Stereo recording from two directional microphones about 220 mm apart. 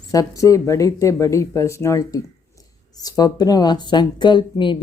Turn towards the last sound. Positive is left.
turn(degrees=20)  # may be behind; listen again after turning